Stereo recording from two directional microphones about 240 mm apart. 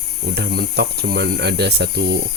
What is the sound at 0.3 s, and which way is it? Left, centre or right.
Speech, right.